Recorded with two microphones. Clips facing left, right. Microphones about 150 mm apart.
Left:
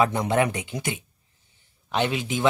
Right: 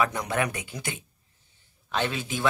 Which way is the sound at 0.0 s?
25° left (ahead or behind).